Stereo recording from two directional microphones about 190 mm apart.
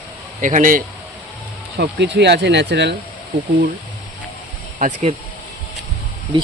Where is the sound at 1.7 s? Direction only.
65° right (ahead or behind).